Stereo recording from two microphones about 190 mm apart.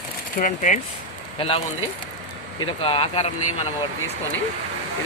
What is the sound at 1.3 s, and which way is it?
Speech, 30° left (ahead or behind).